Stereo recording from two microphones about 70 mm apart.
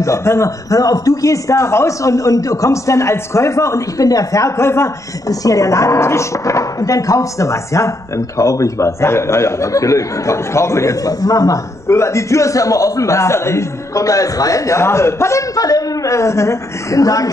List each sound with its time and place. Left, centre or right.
0.0 s speech: left
5.3 s speech: left
11.9 s speech: left
15.5 s speech: left